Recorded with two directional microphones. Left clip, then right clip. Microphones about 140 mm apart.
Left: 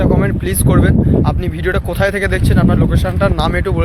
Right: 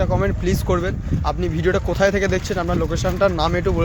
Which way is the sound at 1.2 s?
10° right (ahead or behind).